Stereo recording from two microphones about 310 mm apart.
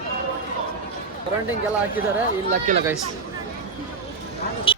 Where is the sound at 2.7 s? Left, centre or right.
Right.